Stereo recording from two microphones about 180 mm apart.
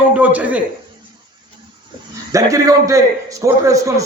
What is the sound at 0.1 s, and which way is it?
Speech, 10° right (ahead or behind).